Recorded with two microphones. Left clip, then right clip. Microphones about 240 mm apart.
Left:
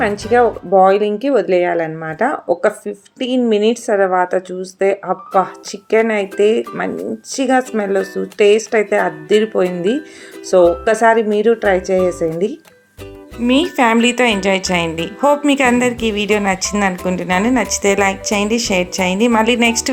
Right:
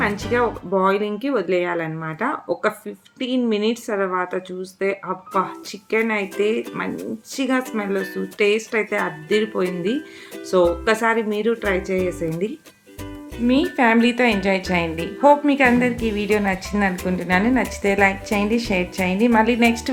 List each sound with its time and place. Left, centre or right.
0.0 s a woman's voice: centre